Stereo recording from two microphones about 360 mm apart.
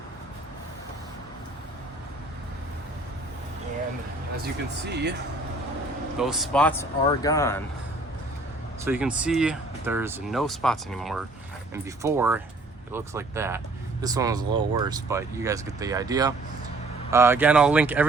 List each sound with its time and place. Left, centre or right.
4.9 s speech: right
6.1 s speech: centre
8.8 s speech: centre